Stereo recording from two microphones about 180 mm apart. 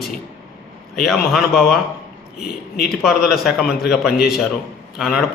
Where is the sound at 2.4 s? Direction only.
60° left (ahead or behind).